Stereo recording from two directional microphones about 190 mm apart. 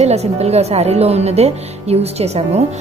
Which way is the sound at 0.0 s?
35° right (ahead or behind).